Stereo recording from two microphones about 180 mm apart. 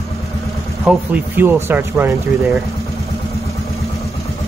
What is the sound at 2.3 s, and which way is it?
Vehicle, centre (ahead or behind).